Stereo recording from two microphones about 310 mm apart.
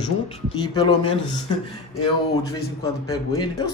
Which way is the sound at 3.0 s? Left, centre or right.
Centre.